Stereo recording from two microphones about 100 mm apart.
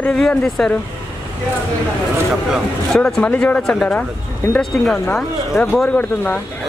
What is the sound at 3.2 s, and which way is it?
Speech, 15° left (ahead or behind).